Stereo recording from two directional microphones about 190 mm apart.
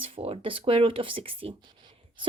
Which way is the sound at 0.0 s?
30° right (ahead or behind).